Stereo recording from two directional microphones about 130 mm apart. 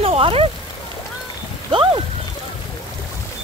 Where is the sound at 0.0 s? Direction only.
50° right (ahead or behind).